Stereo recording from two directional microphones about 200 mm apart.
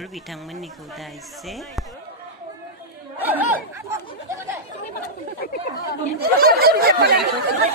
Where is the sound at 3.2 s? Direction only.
10° right (ahead or behind).